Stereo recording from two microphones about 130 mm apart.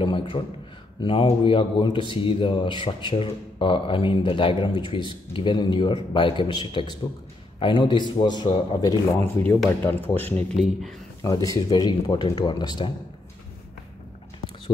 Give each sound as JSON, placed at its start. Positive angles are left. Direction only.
{"t": 0.0, "sound": "speech", "side_deg": 40}
{"t": 9.7, "sound": "speech", "side_deg": 15}
{"t": 10.5, "sound": "speech", "side_deg": 0}
{"t": 11.2, "sound": "speech", "side_deg": 25}